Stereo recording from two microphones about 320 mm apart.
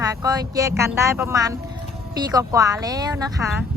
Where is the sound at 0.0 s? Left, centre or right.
Centre.